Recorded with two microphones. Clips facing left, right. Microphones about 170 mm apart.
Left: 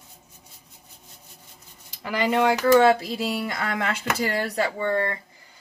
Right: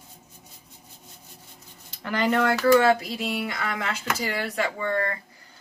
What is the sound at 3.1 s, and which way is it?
Speech, 40° left (ahead or behind).